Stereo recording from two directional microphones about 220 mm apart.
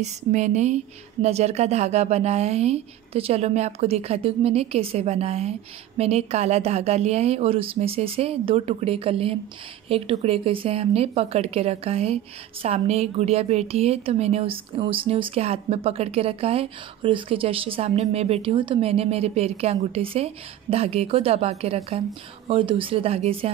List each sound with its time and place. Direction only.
0.0 s a woman's voice: 35° right (ahead or behind)